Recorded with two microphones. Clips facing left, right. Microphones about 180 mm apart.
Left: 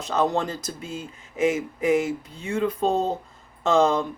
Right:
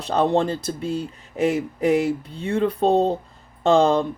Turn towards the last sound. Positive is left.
turn(degrees=-35)  # may be behind; listen again after turning